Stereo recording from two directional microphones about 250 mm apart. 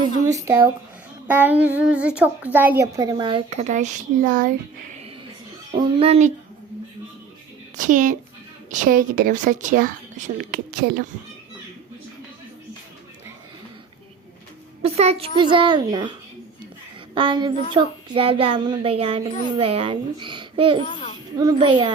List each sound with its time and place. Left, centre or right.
0.3 s a child's voice: centre; by 4.5 s right
5.7 s speech: right
7.8 s speech: right
14.8 s speech: right
17.2 s speech: centre
20.8 s a child's voice: left
21.3 s speech: centre